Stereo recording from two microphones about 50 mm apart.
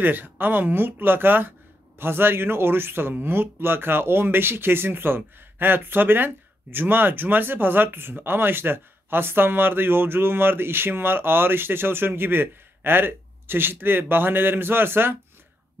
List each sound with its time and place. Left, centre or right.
0.0 s speech: right